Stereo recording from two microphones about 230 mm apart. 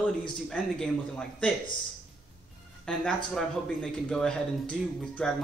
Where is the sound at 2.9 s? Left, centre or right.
Centre.